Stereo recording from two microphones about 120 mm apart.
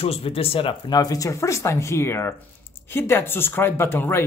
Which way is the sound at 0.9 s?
30° left (ahead or behind).